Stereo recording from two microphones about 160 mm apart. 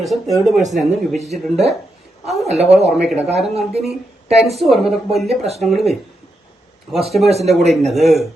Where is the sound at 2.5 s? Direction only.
40° right (ahead or behind).